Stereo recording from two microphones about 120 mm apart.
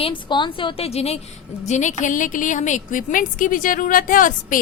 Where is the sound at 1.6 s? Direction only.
80° left.